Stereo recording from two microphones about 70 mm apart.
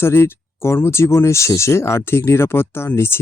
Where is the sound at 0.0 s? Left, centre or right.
Left.